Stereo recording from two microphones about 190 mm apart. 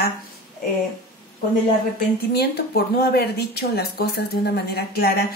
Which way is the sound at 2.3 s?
55° left (ahead or behind).